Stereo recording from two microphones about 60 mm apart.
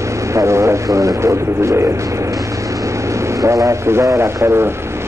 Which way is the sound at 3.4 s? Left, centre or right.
Right.